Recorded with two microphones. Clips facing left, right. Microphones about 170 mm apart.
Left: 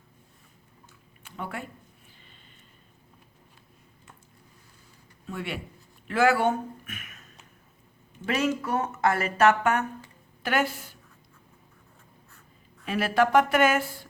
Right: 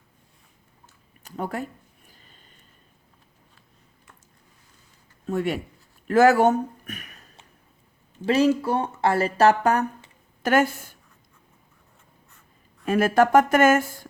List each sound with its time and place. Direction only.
1.2 s speech: 40° right (ahead or behind)
5.2 s speech: 45° right (ahead or behind)
12.8 s speech: 45° right (ahead or behind)